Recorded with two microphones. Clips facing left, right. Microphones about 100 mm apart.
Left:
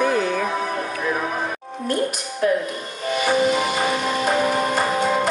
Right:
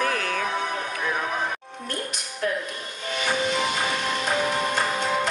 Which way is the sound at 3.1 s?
5° left (ahead or behind).